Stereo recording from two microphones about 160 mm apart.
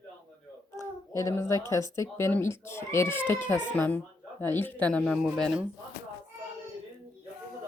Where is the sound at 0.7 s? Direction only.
20° left (ahead or behind).